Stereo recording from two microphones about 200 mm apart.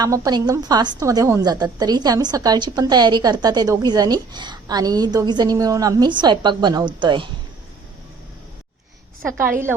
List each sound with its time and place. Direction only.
0.0 s a woman's voice: 20° right (ahead or behind)
9.4 s a woman's voice: 10° right (ahead or behind)